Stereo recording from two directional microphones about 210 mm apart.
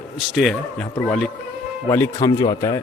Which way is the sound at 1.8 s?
15° left (ahead or behind).